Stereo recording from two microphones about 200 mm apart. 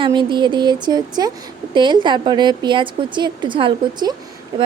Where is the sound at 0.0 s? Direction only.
25° right (ahead or behind).